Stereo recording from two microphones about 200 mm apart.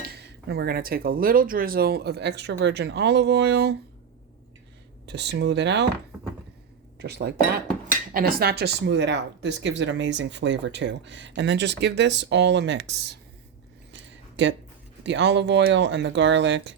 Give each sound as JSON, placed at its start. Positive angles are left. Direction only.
{"t": 0.1, "sound": "speech", "side_deg": -55}
{"t": 5.0, "sound": "speech", "side_deg": -60}
{"t": 7.0, "sound": "speech", "side_deg": -55}
{"t": 13.9, "sound": "a sound", "side_deg": -65}
{"t": 15.0, "sound": "speech", "side_deg": -60}